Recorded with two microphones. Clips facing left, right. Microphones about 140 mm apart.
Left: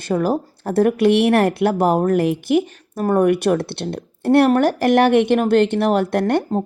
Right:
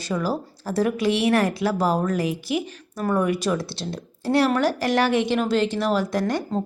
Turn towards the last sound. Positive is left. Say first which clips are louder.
# left 6 dB
turn(degrees=60)  # may be behind; listen again after turning